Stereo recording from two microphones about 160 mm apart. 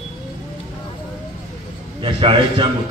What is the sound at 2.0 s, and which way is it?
Speech, 35° right (ahead or behind).